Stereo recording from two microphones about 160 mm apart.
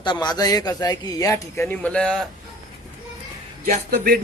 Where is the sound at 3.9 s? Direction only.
65° right (ahead or behind).